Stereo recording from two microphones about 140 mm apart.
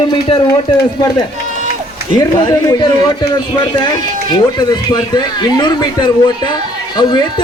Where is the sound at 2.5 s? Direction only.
25° left (ahead or behind).